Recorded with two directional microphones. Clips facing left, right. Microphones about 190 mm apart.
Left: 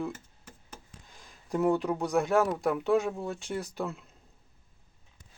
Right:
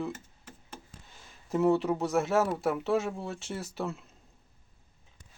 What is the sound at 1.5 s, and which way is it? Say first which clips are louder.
Speech: right 1 dB; centre (ahead or behind).